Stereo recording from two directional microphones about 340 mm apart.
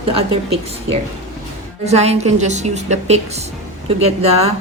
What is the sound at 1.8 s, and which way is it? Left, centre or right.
A woman's voice, centre.